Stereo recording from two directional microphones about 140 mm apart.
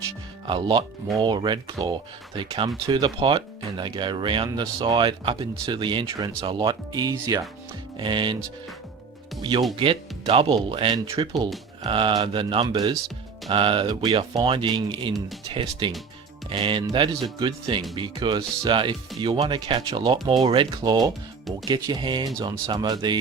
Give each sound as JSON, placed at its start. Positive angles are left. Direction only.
{"t": 0.4, "sound": "speech", "side_deg": -35}
{"t": 9.4, "sound": "speech", "side_deg": -35}